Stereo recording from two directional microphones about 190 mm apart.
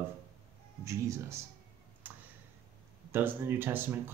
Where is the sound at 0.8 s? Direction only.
15° right (ahead or behind).